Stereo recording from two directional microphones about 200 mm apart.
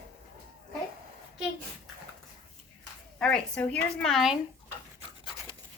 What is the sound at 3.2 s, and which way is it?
A woman's voice, 5° left (ahead or behind).